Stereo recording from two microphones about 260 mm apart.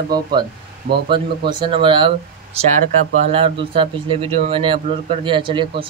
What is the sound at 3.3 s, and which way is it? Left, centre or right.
Speech, right.